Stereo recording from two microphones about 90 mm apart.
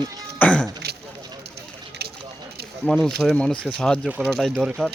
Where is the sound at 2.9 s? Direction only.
5° left (ahead or behind).